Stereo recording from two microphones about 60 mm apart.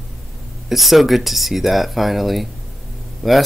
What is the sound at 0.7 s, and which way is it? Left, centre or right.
Speech, centre.